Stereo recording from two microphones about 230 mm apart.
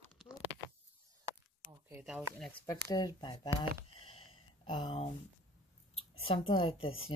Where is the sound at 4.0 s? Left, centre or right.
Left.